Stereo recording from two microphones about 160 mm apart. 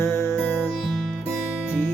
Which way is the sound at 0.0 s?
15° left (ahead or behind).